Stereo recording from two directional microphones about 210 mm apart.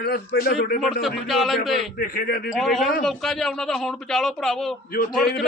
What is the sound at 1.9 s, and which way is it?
Speech, 45° left (ahead or behind).